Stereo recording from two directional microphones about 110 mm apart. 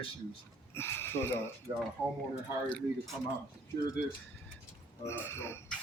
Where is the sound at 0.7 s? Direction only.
20° left (ahead or behind); by 3.2 s 5° left (ahead or behind).